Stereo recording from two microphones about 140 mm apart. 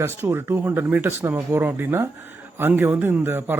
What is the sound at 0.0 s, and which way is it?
A man's voice, 15° right (ahead or behind).